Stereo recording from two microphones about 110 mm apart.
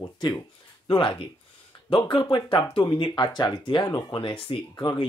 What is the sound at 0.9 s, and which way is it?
Speech, 45° left (ahead or behind).